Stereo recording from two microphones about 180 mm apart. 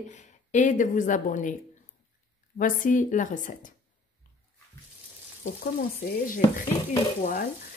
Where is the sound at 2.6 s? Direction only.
45° left (ahead or behind).